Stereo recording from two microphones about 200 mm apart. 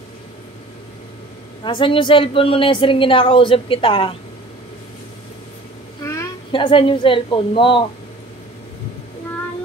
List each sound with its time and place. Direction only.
1.6 s a woman's voice: 25° left (ahead or behind)
6.5 s a woman's voice: 25° left (ahead or behind)